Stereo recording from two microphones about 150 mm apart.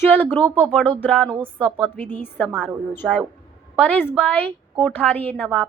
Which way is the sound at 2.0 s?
10° left (ahead or behind).